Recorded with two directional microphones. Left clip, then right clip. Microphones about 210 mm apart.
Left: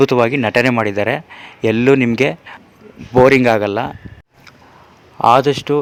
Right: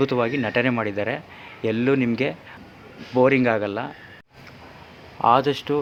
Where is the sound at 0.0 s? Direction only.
50° left (ahead or behind).